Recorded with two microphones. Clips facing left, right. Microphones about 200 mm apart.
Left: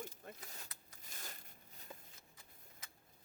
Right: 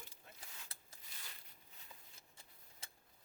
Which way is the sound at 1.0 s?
45° left (ahead or behind).